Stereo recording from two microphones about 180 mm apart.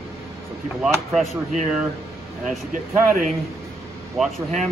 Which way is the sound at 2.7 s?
50° right (ahead or behind).